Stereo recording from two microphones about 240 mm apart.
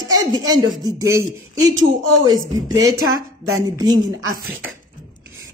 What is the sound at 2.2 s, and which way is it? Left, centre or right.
Speech, centre.